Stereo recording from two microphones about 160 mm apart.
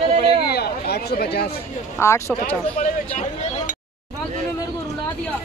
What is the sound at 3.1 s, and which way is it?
Speech, 50° left (ahead or behind).